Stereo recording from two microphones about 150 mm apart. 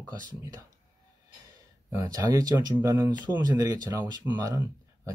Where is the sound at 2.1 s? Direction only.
25° right (ahead or behind).